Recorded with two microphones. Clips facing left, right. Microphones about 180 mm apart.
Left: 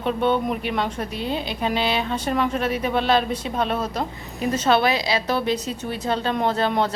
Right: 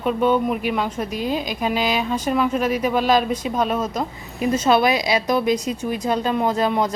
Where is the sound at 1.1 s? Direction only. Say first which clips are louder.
Right 3 dB; 30° left (ahead or behind).